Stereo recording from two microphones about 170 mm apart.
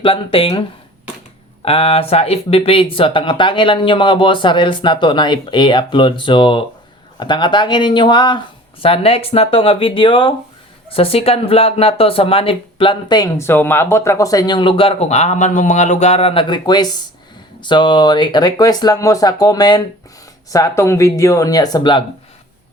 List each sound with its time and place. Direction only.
0.0 s speech: 30° left (ahead or behind)
1.6 s speech: 35° left (ahead or behind)